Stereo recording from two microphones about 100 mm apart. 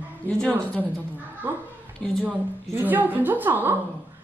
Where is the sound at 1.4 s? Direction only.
20° right (ahead or behind).